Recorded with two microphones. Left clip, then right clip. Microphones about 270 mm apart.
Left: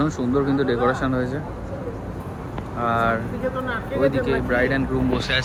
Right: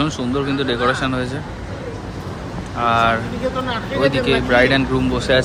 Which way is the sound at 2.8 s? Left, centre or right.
Centre.